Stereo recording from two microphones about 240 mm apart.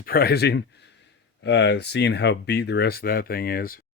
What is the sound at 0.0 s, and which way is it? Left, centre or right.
Speech, left.